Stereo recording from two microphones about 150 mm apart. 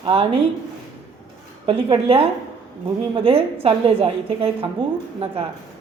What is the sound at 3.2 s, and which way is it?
A woman's voice, 40° right (ahead or behind).